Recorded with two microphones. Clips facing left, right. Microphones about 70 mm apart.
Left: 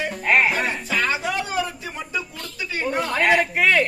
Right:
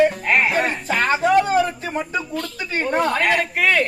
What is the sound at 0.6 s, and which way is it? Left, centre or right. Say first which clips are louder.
Speech: right 3 dB; right.